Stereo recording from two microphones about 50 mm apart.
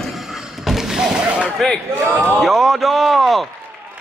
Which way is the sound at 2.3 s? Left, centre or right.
Centre.